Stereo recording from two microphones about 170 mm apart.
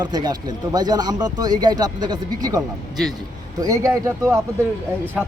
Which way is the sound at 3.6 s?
20° right (ahead or behind).